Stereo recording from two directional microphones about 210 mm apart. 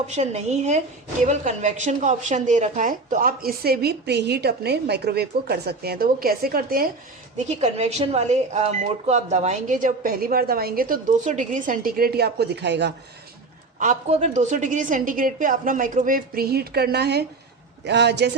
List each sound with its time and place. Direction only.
0.1 s a woman's voice: 30° right (ahead or behind)
7.3 s speech: 30° right (ahead or behind); by 12.9 s 55° right (ahead or behind)
13.7 s a woman's voice: 35° right (ahead or behind); by 18.3 s 55° right (ahead or behind)